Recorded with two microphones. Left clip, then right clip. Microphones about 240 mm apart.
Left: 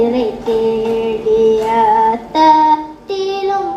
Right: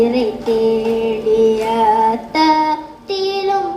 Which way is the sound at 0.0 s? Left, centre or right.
Right.